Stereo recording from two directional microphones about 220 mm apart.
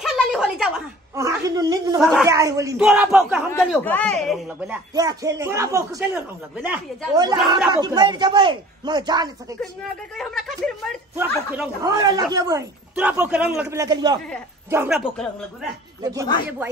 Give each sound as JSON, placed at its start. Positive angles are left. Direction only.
{"t": 0.0, "sound": "a sound", "side_deg": 0}
{"t": 1.1, "sound": "a sound", "side_deg": -15}
{"t": 2.0, "sound": "speech", "side_deg": 0}
{"t": 2.2, "sound": "speech", "side_deg": -15}
{"t": 3.5, "sound": "speech", "side_deg": 5}
{"t": 4.5, "sound": "speech", "side_deg": -10}
{"t": 7.2, "sound": "a man's voice", "side_deg": -20}
{"t": 10.1, "sound": "speech", "side_deg": 0}
{"t": 11.1, "sound": "speech", "side_deg": -10}
{"t": 14.7, "sound": "speech", "side_deg": -5}
{"t": 16.0, "sound": "speech", "side_deg": -15}